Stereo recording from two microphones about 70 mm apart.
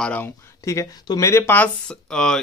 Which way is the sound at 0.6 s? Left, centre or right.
Left.